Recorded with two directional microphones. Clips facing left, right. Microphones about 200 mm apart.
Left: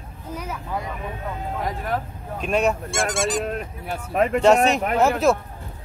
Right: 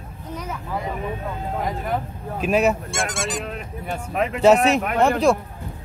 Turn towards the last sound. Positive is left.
turn(degrees=0)  # may be behind; listen again after turning